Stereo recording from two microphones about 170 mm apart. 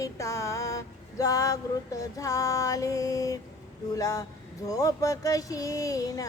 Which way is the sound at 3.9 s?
20° left (ahead or behind).